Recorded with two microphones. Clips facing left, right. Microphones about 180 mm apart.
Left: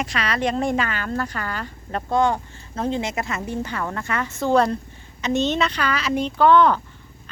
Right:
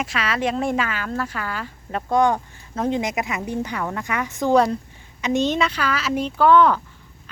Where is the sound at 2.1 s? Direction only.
15° right (ahead or behind).